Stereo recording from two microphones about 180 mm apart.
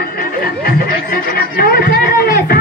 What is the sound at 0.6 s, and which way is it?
Chatter, 55° left (ahead or behind).